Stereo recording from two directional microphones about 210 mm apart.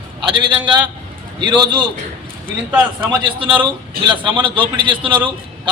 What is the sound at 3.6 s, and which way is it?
A man's voice, 25° right (ahead or behind).